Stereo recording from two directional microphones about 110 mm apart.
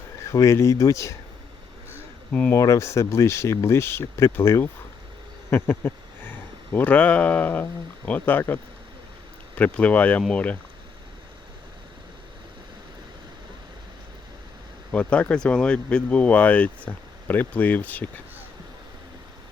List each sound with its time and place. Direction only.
0.3 s speech: 25° left (ahead or behind)
2.5 s speech: 30° left (ahead or behind); by 10.6 s 15° left (ahead or behind)
14.9 s speech: 10° left (ahead or behind)